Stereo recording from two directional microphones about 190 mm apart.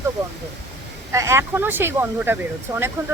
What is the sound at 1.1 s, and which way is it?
Speech, 15° right (ahead or behind).